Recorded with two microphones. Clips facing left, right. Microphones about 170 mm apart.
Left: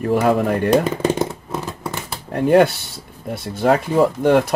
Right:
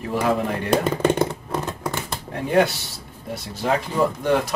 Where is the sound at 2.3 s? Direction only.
60° left (ahead or behind).